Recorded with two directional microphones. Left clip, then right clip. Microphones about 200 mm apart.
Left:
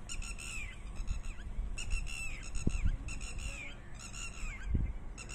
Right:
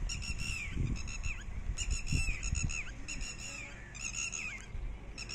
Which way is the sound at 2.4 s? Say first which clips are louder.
Right 4 dB; 60° left (ahead or behind).